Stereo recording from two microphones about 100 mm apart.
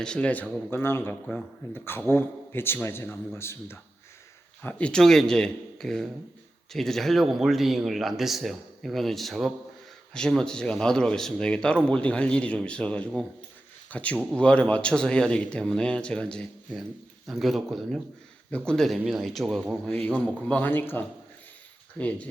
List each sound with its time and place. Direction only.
0.0 s speech: 10° left (ahead or behind)
0.7 s a man's voice: 25° left (ahead or behind)
4.6 s speech: 15° left (ahead or behind)
19.9 s speech: 15° left (ahead or behind)